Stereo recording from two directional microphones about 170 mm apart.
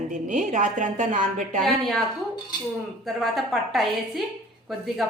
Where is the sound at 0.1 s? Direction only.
45° right (ahead or behind).